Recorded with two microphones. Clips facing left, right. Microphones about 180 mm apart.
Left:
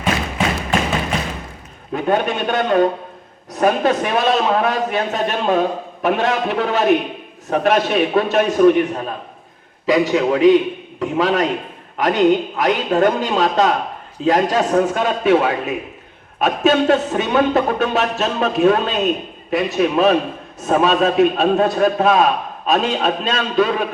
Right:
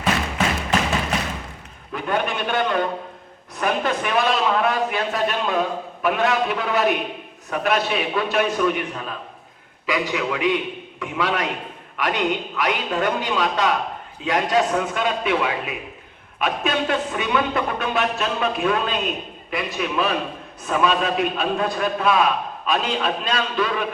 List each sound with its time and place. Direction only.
0.0 s thump: centre (ahead or behind)
1.9 s a man's voice: 40° left (ahead or behind)